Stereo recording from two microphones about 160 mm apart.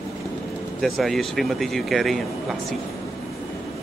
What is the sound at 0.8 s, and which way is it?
Speech, centre (ahead or behind).